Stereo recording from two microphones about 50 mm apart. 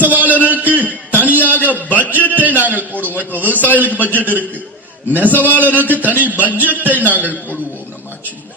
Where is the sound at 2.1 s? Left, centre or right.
Right.